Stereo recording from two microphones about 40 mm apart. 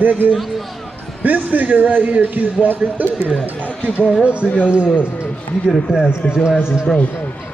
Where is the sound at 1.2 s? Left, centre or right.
Right.